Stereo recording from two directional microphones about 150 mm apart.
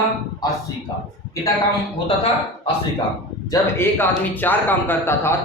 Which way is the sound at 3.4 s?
15° left (ahead or behind).